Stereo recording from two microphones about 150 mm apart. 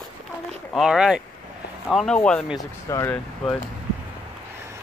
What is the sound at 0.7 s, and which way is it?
Speech, 5° right (ahead or behind).